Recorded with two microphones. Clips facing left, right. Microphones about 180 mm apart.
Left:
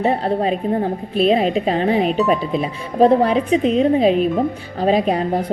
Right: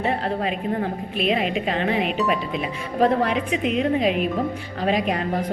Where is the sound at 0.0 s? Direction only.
30° left (ahead or behind).